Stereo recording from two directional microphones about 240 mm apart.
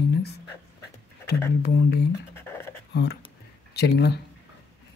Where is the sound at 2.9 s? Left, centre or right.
Left.